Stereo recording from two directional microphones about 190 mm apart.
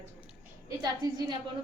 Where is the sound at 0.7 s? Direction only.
20° right (ahead or behind).